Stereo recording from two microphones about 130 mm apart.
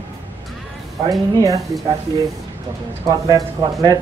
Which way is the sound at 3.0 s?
30° right (ahead or behind).